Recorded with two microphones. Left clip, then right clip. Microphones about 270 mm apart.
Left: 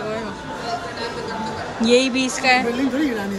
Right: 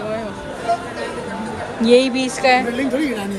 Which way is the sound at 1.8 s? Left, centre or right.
Centre.